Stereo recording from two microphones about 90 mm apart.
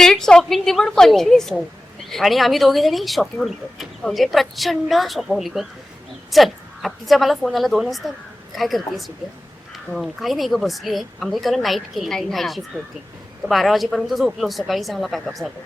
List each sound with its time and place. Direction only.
0.0 s speech: 5° left (ahead or behind)